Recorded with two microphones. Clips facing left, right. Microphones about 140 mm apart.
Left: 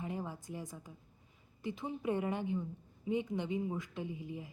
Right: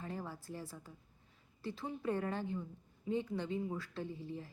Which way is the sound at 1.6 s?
20° left (ahead or behind).